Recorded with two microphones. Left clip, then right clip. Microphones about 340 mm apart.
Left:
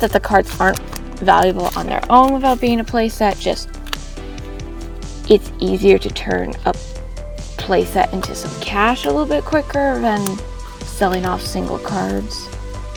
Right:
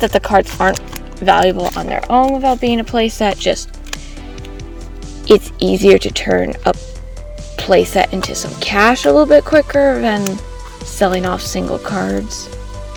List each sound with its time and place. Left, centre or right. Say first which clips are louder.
0.0 s speech: right 2 dB; centre
5.3 s speech: right 3 dB; centre
10.2 s speech: right 2 dB; centre
10.9 s speech: right 3 dB; centre